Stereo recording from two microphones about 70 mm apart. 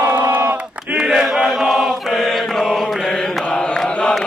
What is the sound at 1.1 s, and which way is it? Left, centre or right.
Chant, centre.